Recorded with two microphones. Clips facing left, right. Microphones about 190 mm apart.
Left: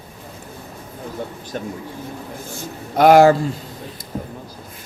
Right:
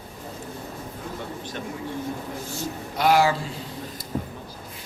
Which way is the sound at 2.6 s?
50° left (ahead or behind).